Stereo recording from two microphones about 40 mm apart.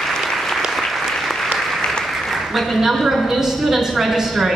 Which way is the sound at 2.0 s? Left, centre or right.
Centre.